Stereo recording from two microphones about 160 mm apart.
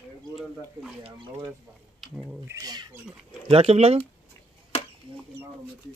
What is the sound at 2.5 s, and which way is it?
Speech, 25° right (ahead or behind).